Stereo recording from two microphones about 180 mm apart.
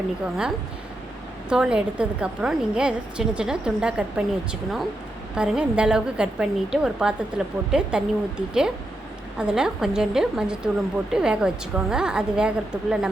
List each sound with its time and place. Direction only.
1.5 s a woman's voice: 5° right (ahead or behind)
5.3 s a woman's voice: 5° right (ahead or behind)